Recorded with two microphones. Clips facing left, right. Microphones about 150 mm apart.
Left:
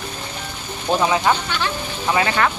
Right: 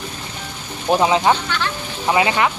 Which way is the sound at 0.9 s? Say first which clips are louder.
Right 2 dB; 20° right (ahead or behind).